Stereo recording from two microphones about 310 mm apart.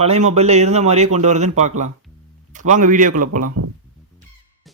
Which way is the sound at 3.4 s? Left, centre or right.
Right.